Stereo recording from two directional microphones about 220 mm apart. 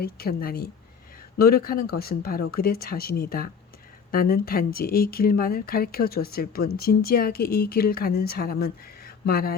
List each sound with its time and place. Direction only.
0.0 s speech: 45° left (ahead or behind)